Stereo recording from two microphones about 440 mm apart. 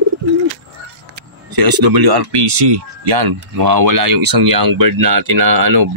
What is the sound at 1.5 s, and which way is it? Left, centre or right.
Speech, right.